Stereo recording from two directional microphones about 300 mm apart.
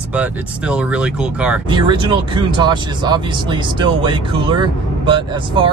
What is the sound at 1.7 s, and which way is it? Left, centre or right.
Speech, centre.